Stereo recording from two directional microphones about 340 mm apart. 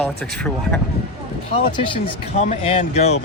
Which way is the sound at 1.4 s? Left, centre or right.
Centre.